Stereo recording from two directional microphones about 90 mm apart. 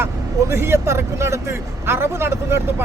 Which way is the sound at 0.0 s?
30° right (ahead or behind).